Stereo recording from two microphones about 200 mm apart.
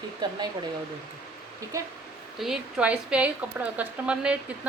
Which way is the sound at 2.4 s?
Centre (ahead or behind).